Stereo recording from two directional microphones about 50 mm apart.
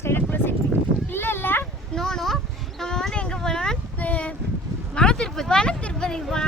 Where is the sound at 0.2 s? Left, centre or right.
Left.